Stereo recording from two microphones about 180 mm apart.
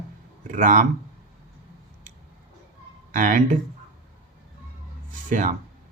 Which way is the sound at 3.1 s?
45° right (ahead or behind).